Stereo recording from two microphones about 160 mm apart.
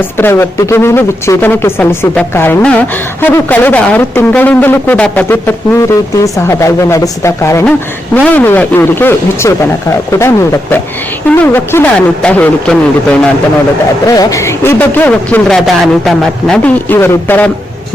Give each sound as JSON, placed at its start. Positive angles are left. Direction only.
{"t": 0.2, "sound": "speech", "side_deg": 15}
{"t": 14.2, "sound": "speech", "side_deg": 20}